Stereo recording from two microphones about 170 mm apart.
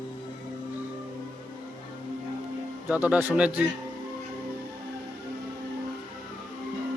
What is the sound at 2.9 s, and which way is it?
Speech, 10° right (ahead or behind).